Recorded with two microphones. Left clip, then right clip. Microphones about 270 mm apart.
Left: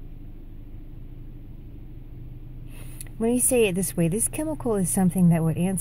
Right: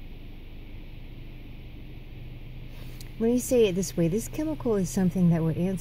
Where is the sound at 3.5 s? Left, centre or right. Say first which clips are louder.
Even; centre.